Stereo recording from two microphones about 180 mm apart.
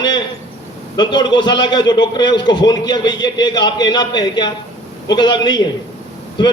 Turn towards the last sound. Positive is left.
turn(degrees=25)  # may be behind; listen again after turning